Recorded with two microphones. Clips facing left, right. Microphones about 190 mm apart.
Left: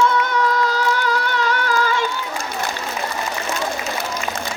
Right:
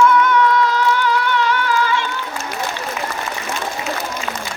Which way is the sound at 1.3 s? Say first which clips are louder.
Right 2 dB; 45° left (ahead or behind).